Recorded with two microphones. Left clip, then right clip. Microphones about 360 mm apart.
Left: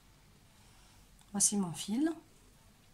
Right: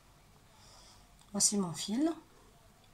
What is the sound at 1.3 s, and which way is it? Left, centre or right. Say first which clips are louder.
Speech: right 2 dB; centre.